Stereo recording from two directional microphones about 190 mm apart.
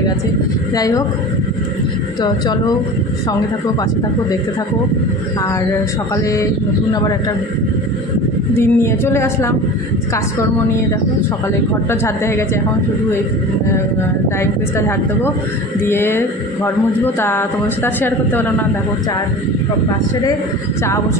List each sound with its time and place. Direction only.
0.7 s a woman's voice: 20° left (ahead or behind)
6.9 s a woman's voice: 20° left (ahead or behind)
8.5 s speech: 15° left (ahead or behind)
11.9 s speech: 10° left (ahead or behind)
15.8 s speech: 10° left (ahead or behind)